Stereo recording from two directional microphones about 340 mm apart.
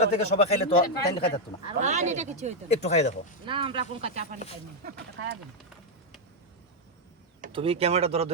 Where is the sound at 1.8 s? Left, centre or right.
Right.